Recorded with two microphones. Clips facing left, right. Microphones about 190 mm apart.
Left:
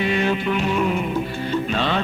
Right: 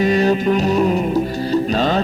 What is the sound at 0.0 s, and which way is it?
Music, 40° right (ahead or behind).